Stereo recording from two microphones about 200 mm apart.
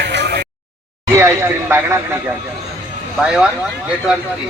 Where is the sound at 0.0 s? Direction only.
60° right (ahead or behind).